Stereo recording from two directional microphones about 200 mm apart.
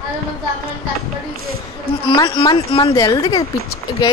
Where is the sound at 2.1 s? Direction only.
25° left (ahead or behind).